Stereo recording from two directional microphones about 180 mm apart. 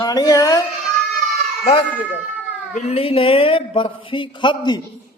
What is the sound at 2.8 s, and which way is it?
Speech, 35° left (ahead or behind).